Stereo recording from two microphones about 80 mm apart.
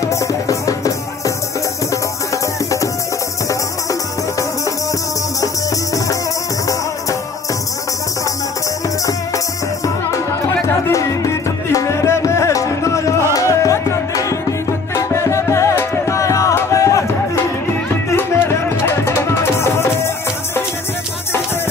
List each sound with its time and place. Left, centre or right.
0.0 s music: left
10.9 s music: left
18.1 s music: left